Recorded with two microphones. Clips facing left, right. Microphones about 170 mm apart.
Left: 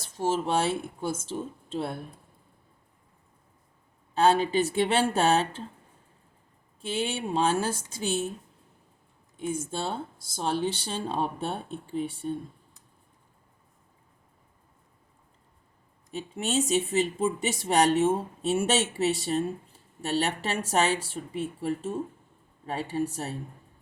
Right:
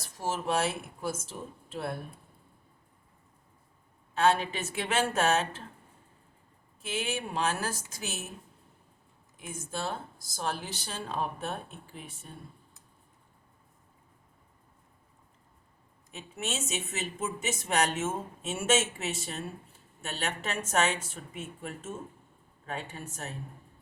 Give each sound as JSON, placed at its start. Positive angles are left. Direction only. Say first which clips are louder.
{"t": 0.0, "sound": "speech", "louder": "left 6 dB", "side_deg": 25}
{"t": 4.1, "sound": "speech", "louder": "left 4 dB", "side_deg": 35}
{"t": 6.8, "sound": "speech", "louder": "left 4 dB", "side_deg": 30}
{"t": 9.5, "sound": "speech", "louder": "left 4 dB", "side_deg": 30}
{"t": 16.1, "sound": "speech", "louder": "left 8 dB", "side_deg": 35}